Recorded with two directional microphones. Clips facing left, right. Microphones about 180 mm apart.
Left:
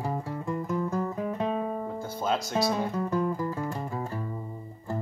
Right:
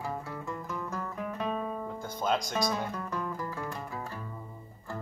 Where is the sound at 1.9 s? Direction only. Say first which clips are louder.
Right 1 dB; 5° left (ahead or behind).